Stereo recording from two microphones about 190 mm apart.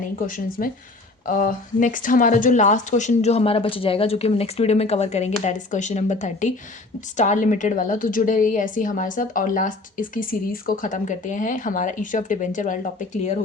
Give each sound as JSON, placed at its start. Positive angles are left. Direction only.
{"t": 0.3, "sound": "a woman's voice", "side_deg": 45}